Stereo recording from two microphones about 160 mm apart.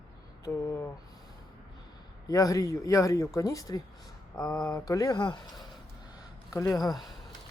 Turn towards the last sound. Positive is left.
turn(degrees=0)  # may be behind; listen again after turning